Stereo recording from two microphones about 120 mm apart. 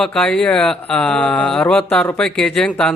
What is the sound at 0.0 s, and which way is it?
A man's voice, 5° left (ahead or behind).